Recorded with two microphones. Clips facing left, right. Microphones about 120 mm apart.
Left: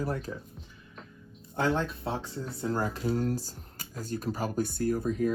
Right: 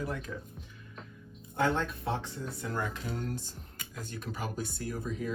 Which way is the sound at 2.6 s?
35° left (ahead or behind).